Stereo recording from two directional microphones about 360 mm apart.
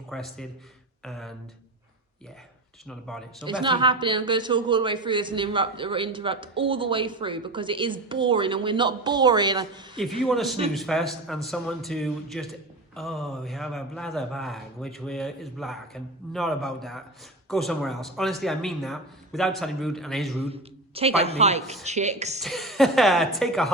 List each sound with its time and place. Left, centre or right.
0.1 s a man's voice: centre
2.8 s a man's voice: centre
3.3 s a man's voice: centre
10.2 s a man's voice: centre
20.4 s a man's voice: centre
22.4 s a man's voice: centre